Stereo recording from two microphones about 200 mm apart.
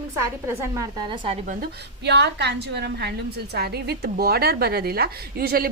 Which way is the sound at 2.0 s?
60° right (ahead or behind).